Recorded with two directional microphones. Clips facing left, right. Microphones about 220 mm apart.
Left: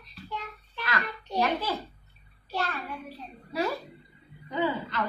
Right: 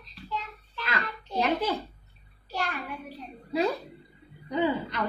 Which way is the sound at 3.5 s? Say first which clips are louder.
Right 3 dB; 20° right (ahead or behind).